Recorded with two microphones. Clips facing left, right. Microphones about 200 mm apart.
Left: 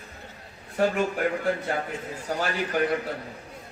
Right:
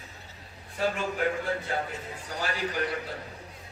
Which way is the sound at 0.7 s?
55° left (ahead or behind).